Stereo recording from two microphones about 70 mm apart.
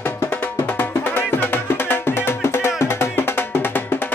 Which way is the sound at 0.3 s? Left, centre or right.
Left.